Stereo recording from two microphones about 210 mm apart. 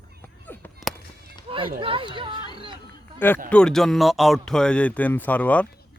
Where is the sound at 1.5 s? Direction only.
25° right (ahead or behind).